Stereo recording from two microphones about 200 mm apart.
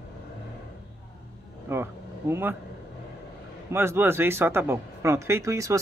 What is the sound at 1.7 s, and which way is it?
Speech, 15° right (ahead or behind).